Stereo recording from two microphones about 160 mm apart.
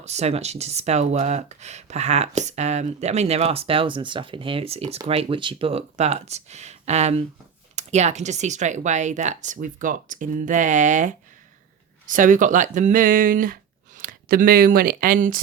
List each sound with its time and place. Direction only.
0.0 s speech: 45° right (ahead or behind); by 15.4 s 60° right (ahead or behind)